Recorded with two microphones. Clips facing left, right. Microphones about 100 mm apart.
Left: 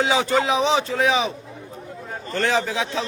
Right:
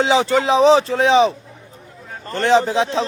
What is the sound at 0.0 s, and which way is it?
Speech, 25° right (ahead or behind).